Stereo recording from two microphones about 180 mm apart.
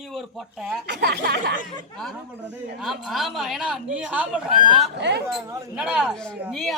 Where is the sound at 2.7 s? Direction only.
Centre (ahead or behind).